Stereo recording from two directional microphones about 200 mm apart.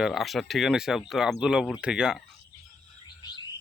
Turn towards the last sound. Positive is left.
turn(degrees=20)  # may be behind; listen again after turning